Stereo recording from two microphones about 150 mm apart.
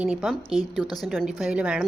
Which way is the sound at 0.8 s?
25° left (ahead or behind).